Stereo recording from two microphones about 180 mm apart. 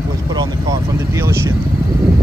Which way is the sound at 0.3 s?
20° right (ahead or behind).